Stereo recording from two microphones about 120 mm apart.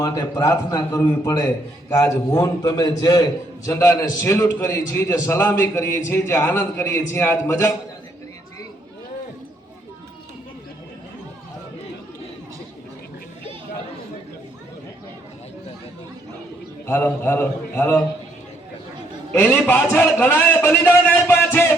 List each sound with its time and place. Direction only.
0.0 s a man's voice: 30° left (ahead or behind)
16.8 s a man's voice: 20° left (ahead or behind)
19.3 s a man's voice: 15° left (ahead or behind)